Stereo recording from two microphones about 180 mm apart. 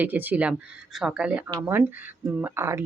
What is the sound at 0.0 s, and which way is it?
Speech, 10° right (ahead or behind).